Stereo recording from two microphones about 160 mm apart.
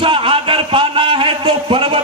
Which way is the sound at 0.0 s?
35° right (ahead or behind).